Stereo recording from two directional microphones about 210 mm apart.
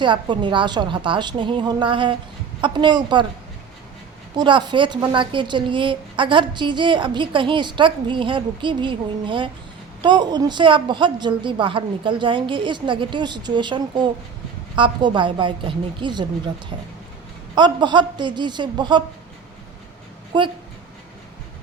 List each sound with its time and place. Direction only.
0.0 s a woman's voice: 20° right (ahead or behind)
4.4 s a woman's voice: 20° right (ahead or behind)
17.5 s a woman's voice: 20° right (ahead or behind)
20.3 s a woman's voice: 20° right (ahead or behind)